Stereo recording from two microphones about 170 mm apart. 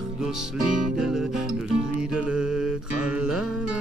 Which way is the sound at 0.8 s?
5° right (ahead or behind).